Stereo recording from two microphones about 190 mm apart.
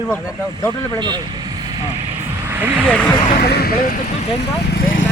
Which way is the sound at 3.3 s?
55° left (ahead or behind).